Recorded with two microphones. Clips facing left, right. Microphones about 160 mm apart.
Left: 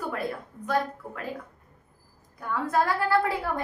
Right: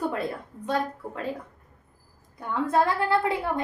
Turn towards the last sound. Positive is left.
turn(degrees=-20)  # may be behind; listen again after turning